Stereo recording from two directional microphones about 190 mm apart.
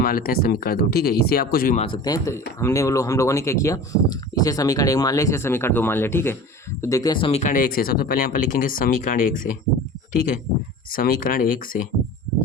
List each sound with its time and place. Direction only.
0.0 s speech: 50° left (ahead or behind)
1.8 s speech: 20° left (ahead or behind); by 9.1 s 50° left (ahead or behind)
10.9 s speech: 50° left (ahead or behind)